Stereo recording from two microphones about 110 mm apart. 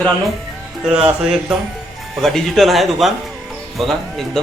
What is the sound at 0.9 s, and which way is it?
Speech, 10° right (ahead or behind).